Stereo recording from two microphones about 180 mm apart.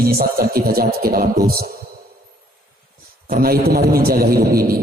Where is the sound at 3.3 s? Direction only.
55° right (ahead or behind).